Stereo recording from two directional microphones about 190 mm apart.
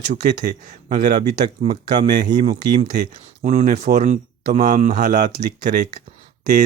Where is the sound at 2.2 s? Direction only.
40° right (ahead or behind).